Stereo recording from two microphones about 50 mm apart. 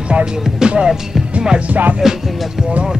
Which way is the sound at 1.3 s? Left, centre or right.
Right.